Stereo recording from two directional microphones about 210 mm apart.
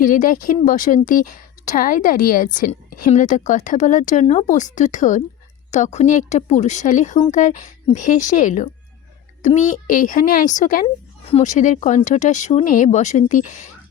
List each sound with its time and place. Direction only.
0.0 s a woman's voice: 40° left (ahead or behind)
10.8 s a woman's voice: 30° left (ahead or behind)